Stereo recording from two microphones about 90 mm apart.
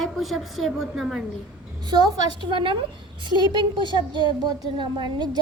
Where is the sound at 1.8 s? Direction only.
55° right (ahead or behind).